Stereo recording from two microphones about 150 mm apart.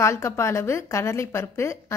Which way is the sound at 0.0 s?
20° left (ahead or behind).